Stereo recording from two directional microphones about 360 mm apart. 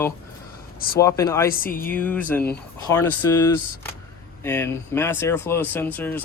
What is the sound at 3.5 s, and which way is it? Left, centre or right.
Speech, left.